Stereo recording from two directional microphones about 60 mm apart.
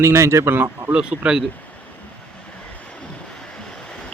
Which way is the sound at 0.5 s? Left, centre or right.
Right.